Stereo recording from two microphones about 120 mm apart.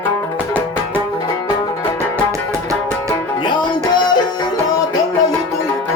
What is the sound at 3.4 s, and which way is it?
Music, 40° left (ahead or behind).